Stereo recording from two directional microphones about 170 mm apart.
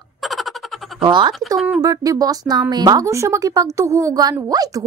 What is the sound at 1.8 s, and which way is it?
A woman's voice, 20° right (ahead or behind).